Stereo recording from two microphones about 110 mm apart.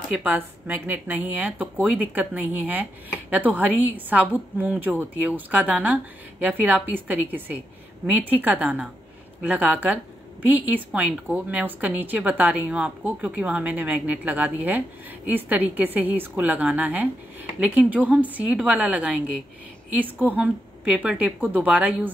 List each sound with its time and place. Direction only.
0.1 s speech: 15° right (ahead or behind)